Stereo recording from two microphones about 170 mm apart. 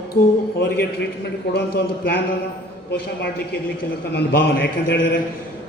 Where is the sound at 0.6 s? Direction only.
70° left (ahead or behind).